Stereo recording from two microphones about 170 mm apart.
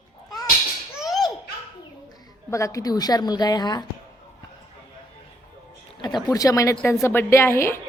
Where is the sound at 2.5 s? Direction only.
15° left (ahead or behind).